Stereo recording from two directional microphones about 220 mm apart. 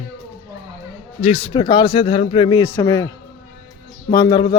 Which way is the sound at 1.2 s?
25° left (ahead or behind).